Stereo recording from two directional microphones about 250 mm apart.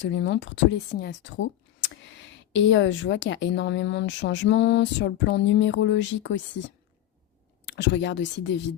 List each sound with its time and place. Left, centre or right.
0.0 s a woman's voice: left
7.7 s a woman's voice: left